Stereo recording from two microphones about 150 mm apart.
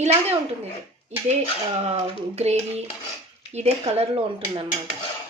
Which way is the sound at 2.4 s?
45° right (ahead or behind).